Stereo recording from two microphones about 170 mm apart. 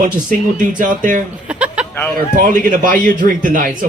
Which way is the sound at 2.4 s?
50° right (ahead or behind).